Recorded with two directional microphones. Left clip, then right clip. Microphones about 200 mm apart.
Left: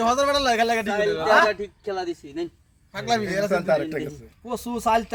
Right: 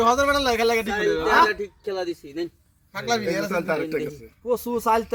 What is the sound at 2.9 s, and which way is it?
Speech, 35° left (ahead or behind).